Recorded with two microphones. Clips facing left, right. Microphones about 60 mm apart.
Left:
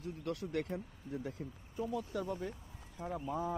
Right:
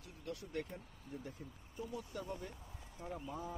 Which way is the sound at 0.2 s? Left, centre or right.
Left.